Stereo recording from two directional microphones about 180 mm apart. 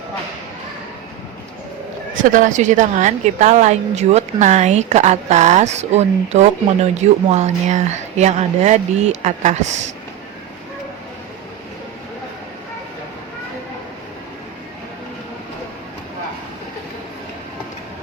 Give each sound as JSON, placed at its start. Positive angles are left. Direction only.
{"t": 2.3, "sound": "a woman's voice", "side_deg": -45}